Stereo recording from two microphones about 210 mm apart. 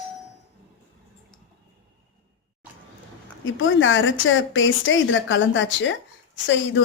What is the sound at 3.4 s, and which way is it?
A woman's voice, 65° left (ahead or behind).